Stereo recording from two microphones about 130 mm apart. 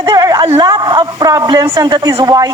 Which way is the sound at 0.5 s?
30° right (ahead or behind).